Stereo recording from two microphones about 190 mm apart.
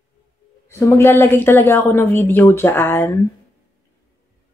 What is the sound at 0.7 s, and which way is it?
Speech, 15° left (ahead or behind).